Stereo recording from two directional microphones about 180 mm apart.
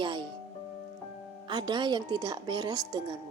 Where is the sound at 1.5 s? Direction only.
25° right (ahead or behind).